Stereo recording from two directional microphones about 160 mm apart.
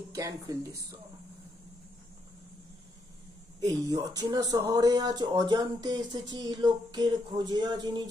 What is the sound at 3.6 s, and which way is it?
Speech, 25° right (ahead or behind).